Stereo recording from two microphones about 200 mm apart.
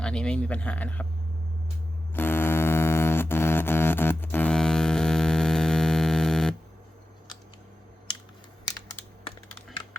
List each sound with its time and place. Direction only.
0.0 s speech: 5° left (ahead or behind)
2.1 s music: 10° left (ahead or behind)